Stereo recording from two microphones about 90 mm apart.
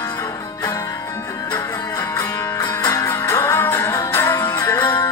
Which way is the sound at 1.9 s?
35° left (ahead or behind).